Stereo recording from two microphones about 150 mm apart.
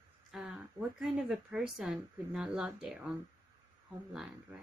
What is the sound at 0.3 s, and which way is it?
A woman's voice, 5° right (ahead or behind).